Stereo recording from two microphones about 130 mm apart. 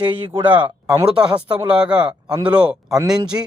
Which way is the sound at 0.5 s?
15° right (ahead or behind).